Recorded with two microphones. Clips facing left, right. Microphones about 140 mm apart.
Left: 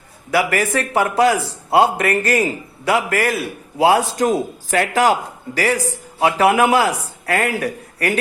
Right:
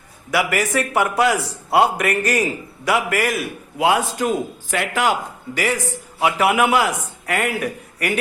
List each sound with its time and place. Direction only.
0.3 s a man's voice: 30° left (ahead or behind)